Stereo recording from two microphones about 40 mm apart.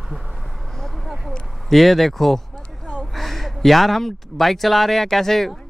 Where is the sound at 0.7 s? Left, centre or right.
Centre.